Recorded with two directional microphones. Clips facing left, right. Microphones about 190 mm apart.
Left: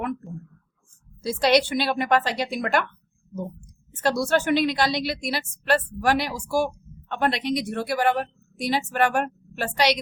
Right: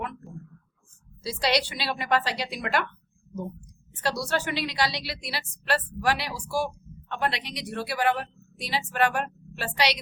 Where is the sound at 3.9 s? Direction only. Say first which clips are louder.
Left 6 dB; 50° left (ahead or behind).